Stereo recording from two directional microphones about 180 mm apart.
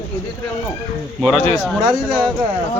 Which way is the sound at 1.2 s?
5° left (ahead or behind).